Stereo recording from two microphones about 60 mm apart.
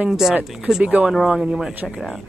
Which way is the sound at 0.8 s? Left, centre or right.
Centre.